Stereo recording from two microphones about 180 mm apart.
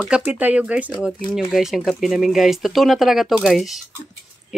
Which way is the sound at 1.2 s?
25° left (ahead or behind).